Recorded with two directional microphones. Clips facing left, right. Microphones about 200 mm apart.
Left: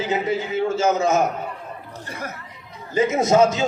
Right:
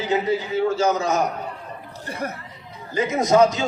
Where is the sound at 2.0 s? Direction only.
35° right (ahead or behind).